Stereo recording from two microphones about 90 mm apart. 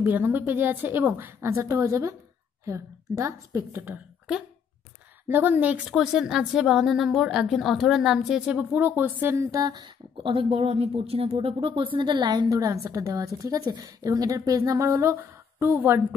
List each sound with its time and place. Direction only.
0.0 s a woman's voice: 20° right (ahead or behind)
5.3 s a woman's voice: 20° right (ahead or behind)
5.9 s a woman's voice: 5° right (ahead or behind); by 11.7 s 85° right
11.8 s a woman's voice: 65° right (ahead or behind); by 16.2 s 25° right (ahead or behind)